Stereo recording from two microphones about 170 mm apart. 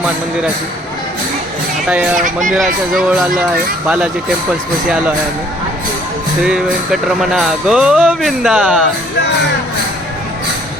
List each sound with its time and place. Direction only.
2.1 s speech: 50° right (ahead or behind)
2.5 s speech: centre (ahead or behind)
6.4 s speech: centre (ahead or behind)